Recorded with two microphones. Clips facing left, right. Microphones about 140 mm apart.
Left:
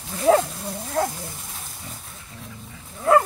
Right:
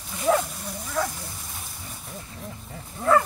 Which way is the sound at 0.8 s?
50° left (ahead or behind).